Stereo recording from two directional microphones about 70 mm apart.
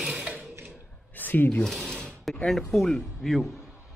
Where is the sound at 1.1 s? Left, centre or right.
Left.